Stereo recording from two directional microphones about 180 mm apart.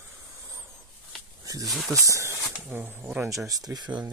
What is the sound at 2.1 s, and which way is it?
Speech, 15° right (ahead or behind).